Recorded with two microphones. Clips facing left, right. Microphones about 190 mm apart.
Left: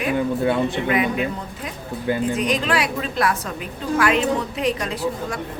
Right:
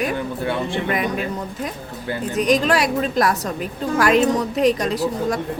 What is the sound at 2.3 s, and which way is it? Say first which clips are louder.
A woman's voice: right 4 dB; 40° right (ahead or behind).